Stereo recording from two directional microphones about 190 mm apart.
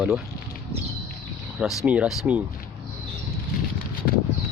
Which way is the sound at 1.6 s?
5° right (ahead or behind).